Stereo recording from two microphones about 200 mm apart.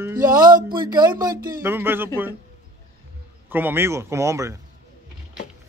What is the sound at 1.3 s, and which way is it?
Speech, 45° right (ahead or behind).